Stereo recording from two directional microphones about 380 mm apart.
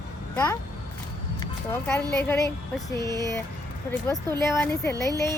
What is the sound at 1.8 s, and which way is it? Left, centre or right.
Speech, centre.